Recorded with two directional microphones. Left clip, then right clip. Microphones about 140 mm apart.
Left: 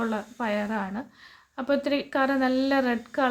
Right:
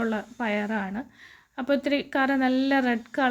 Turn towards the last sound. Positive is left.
turn(degrees=-15)  # may be behind; listen again after turning